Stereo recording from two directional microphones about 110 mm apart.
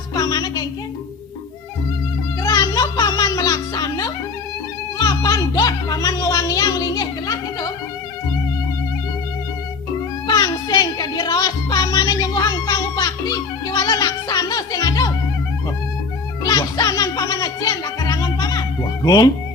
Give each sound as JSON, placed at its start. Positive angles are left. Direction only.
{"t": 0.1, "sound": "music", "side_deg": 35}
{"t": 2.4, "sound": "music", "side_deg": 35}
{"t": 10.2, "sound": "music", "side_deg": 35}
{"t": 16.4, "sound": "music", "side_deg": 35}